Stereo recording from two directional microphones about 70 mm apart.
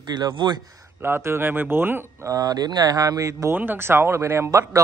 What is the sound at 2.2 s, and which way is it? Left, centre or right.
Speech, right.